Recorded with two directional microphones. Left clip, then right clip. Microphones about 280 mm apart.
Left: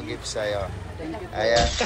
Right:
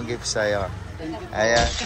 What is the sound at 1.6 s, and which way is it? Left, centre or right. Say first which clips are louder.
Speech: even; centre.